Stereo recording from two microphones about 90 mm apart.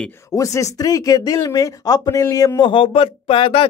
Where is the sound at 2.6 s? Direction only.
70° left (ahead or behind).